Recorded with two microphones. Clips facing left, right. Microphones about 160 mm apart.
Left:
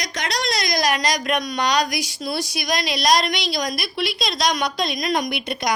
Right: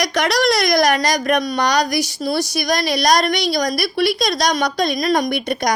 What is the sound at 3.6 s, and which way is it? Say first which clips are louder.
A woman's voice: right 7 dB; 40° right (ahead or behind).